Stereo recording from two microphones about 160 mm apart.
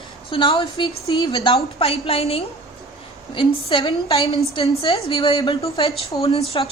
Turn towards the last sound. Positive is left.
turn(degrees=30)  # may be behind; listen again after turning